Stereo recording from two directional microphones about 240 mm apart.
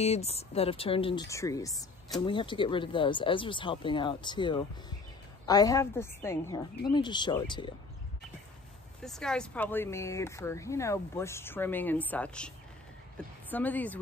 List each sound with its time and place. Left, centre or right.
0.0 s speech: left
9.0 s speech: centre